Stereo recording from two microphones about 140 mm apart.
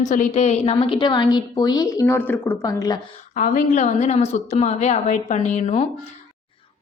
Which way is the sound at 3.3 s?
65° left (ahead or behind).